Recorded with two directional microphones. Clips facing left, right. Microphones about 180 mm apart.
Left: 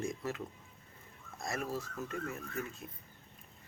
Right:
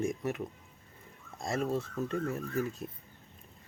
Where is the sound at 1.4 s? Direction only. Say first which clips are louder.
Right 6 dB; 25° right (ahead or behind).